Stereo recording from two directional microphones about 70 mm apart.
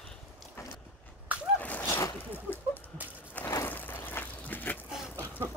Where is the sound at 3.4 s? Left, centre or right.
Left.